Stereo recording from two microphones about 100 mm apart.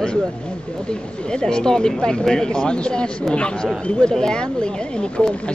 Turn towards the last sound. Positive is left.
turn(degrees=10)  # may be behind; listen again after turning